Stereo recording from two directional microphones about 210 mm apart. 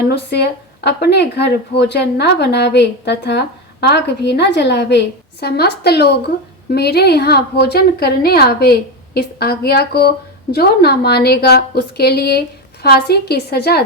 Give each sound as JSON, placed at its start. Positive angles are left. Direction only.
{"t": 0.0, "sound": "speech", "side_deg": 50}